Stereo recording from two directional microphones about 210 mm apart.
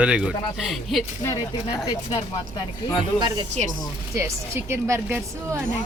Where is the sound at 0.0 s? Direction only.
5° right (ahead or behind).